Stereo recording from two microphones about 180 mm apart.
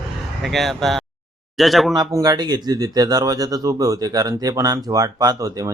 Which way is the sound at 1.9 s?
20° right (ahead or behind).